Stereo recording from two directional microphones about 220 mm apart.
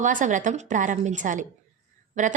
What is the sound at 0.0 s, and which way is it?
A woman's voice, 35° right (ahead or behind).